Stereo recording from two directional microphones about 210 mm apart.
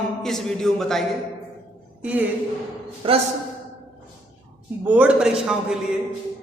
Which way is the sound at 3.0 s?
25° right (ahead or behind).